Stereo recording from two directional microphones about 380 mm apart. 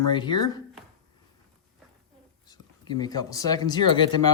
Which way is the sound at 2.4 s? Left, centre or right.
Centre.